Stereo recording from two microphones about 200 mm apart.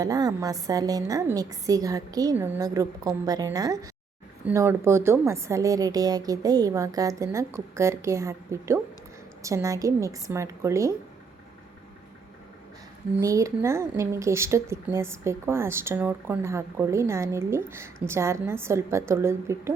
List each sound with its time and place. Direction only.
0.0 s a woman's voice: 20° right (ahead or behind)
13.1 s speech: 15° right (ahead or behind)